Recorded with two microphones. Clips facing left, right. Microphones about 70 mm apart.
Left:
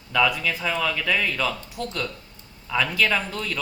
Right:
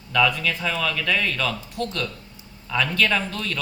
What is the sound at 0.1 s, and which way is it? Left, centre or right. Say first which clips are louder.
Speech: right 1 dB; centre.